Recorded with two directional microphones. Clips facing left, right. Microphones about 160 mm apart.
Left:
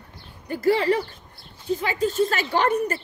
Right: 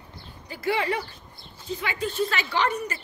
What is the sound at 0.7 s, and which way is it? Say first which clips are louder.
A woman's voice: left 5 dB; 35° left (ahead or behind).